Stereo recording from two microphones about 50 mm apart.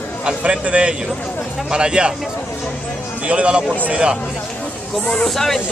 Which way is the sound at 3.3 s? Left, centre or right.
Right.